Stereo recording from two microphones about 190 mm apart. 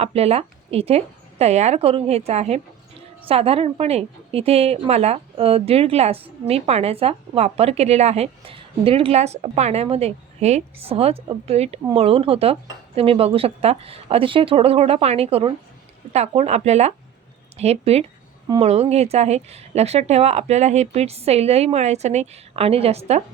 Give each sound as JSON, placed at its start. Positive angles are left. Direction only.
{"t": 0.0, "sound": "a woman's voice", "side_deg": -30}